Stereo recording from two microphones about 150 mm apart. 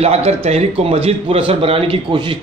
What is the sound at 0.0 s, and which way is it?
A man's voice, 45° right (ahead or behind).